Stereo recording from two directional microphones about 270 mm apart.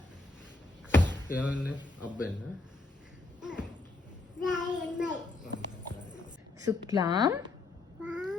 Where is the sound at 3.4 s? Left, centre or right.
Centre.